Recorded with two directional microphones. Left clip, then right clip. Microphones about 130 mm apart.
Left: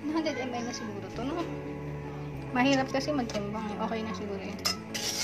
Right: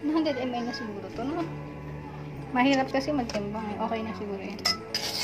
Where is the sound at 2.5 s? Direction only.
5° right (ahead or behind).